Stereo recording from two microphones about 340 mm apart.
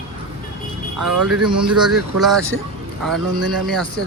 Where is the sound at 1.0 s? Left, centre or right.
Right.